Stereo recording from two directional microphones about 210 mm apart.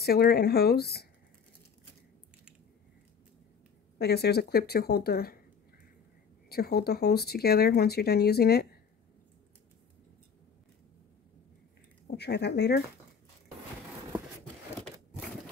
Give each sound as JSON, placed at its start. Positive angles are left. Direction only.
{"t": 0.0, "sound": "speech", "side_deg": 50}
{"t": 4.0, "sound": "speech", "side_deg": 50}
{"t": 6.5, "sound": "speech", "side_deg": 50}
{"t": 12.2, "sound": "speech", "side_deg": 50}